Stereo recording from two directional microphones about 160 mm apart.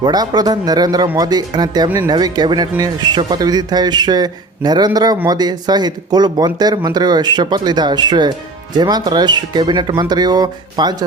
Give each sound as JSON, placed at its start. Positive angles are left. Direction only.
{"t": 0.0, "sound": "speech", "side_deg": -25}